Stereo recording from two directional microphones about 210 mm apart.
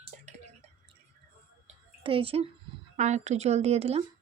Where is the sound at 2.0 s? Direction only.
25° right (ahead or behind).